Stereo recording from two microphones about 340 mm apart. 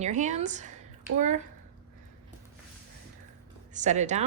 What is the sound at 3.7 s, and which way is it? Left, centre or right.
Speech, right.